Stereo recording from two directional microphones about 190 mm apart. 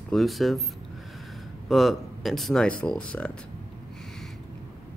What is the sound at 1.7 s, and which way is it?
Speech, centre (ahead or behind).